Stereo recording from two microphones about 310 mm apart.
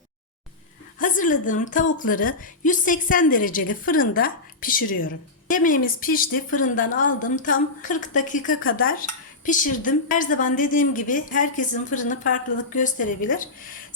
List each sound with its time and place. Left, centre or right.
0.9 s a woman's voice: left